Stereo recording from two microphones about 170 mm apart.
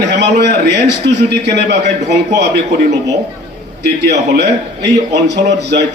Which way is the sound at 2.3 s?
75° right (ahead or behind).